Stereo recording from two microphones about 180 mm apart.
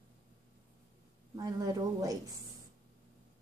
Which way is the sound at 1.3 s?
20° right (ahead or behind).